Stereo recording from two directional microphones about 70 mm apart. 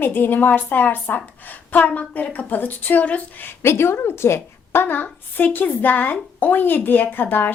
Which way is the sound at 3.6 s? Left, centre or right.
Left.